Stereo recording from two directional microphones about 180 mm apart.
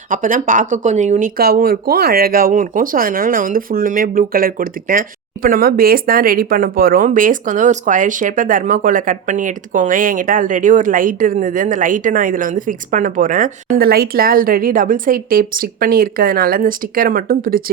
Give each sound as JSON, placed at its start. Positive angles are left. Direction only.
{"t": 0.1, "sound": "speech", "side_deg": -50}